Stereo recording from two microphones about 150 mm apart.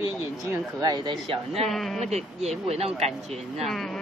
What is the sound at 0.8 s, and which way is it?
Speech, 30° right (ahead or behind).